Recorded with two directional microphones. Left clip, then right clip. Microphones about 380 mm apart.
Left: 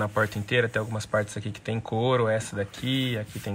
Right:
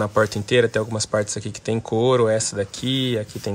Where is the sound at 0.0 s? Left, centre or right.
Centre.